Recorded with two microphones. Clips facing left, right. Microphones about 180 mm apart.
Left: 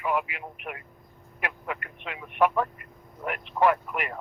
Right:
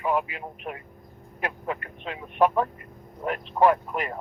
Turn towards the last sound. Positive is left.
turn(degrees=-30)  # may be behind; listen again after turning